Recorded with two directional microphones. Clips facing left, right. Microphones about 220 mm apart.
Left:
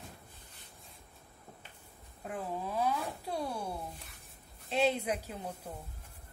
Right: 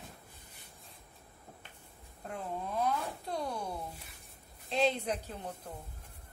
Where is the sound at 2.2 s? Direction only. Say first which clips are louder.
Left 1 dB; 5° left (ahead or behind).